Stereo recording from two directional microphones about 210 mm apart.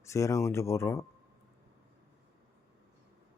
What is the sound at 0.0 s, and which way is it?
A man's voice, 15° left (ahead or behind).